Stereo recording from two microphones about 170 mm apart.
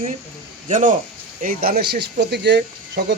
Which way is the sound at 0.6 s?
45° right (ahead or behind).